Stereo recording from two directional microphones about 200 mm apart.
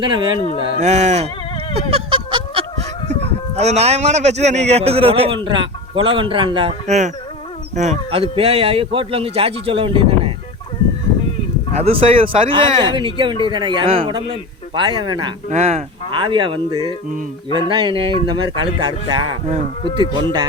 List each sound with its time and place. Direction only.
0.0 s a man's voice: 25° right (ahead or behind)
1.9 s a sound: 25° right (ahead or behind)
3.5 s a man's voice: 30° right (ahead or behind)
11.8 s a man's voice: 30° right (ahead or behind)
15.4 s a man's voice: 35° right (ahead or behind)